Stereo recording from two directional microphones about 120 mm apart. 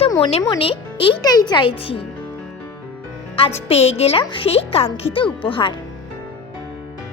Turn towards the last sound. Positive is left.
turn(degrees=45)  # may be behind; listen again after turning